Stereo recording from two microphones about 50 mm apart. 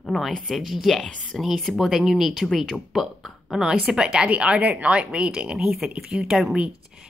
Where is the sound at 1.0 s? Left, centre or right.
Centre.